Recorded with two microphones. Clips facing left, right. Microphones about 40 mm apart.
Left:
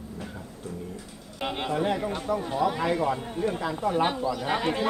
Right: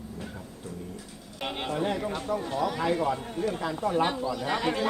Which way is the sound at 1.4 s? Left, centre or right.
Centre.